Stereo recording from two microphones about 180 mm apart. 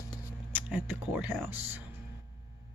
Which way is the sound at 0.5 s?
10° right (ahead or behind).